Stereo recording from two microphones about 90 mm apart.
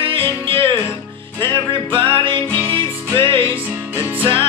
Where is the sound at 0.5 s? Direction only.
75° right (ahead or behind).